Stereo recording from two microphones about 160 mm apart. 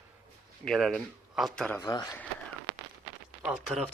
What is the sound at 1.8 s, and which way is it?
Speech, 25° left (ahead or behind).